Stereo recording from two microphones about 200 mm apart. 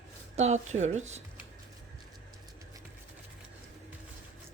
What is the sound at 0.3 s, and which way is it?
Speech, 35° right (ahead or behind).